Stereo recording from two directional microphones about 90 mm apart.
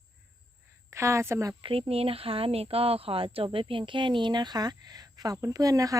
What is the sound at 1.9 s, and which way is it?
A woman's voice, 90° right.